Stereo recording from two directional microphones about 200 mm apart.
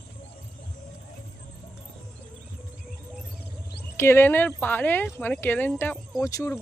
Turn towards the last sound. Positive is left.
turn(degrees=15)  # may be behind; listen again after turning